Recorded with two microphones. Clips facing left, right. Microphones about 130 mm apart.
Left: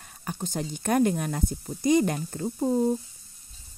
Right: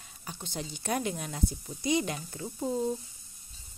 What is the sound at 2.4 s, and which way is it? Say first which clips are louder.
Speech: left 7 dB; 35° left (ahead or behind).